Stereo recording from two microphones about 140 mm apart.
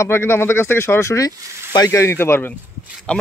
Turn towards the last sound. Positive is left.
turn(degrees=10)  # may be behind; listen again after turning